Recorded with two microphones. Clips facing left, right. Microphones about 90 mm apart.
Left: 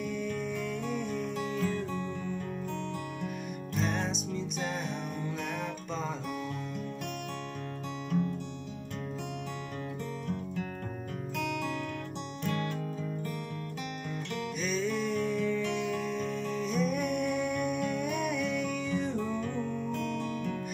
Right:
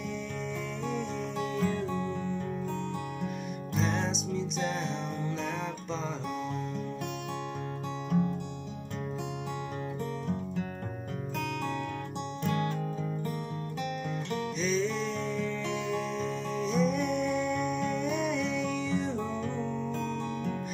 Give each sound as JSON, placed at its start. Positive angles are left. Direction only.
{"t": 0.0, "sound": "music", "side_deg": 10}
{"t": 3.7, "sound": "music", "side_deg": 5}
{"t": 14.6, "sound": "music", "side_deg": 5}
{"t": 19.4, "sound": "music", "side_deg": -25}